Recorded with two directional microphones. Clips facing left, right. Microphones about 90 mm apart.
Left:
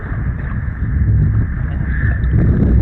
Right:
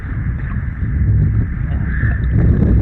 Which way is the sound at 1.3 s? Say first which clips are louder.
Even; 35° left (ahead or behind).